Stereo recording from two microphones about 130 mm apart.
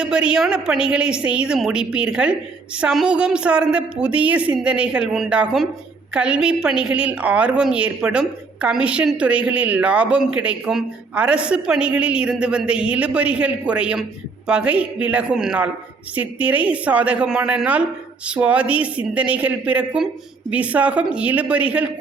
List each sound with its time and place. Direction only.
0.0 s a woman's voice: 5° right (ahead or behind)